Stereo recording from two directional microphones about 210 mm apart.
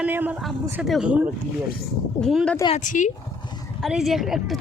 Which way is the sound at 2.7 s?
35° left (ahead or behind).